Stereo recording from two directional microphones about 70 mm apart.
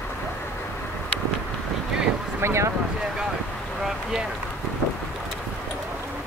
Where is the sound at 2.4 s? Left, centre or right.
Right.